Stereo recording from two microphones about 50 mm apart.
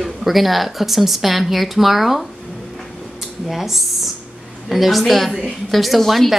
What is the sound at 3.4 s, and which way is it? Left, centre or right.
Speech, centre.